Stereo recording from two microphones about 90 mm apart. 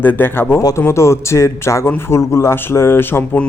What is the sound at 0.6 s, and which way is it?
A man's voice, 40° left (ahead or behind).